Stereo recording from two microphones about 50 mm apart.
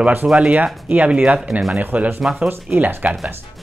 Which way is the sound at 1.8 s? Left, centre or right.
Right.